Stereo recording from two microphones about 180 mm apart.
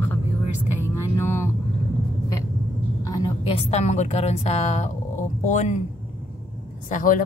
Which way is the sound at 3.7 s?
40° left (ahead or behind).